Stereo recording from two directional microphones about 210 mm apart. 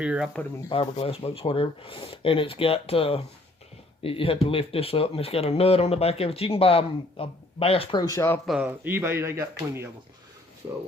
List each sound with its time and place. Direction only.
0.0 s speech: 5° right (ahead or behind)
0.7 s speech: 25° left (ahead or behind)
8.1 s speech: 10° left (ahead or behind)
8.4 s speech: 5° right (ahead or behind)